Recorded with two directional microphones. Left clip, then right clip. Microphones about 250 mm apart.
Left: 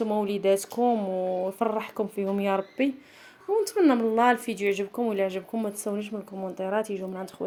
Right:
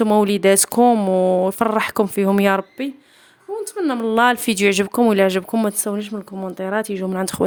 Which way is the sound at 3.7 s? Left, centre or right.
Centre.